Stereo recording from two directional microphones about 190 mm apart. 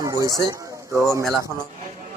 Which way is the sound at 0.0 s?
15° right (ahead or behind).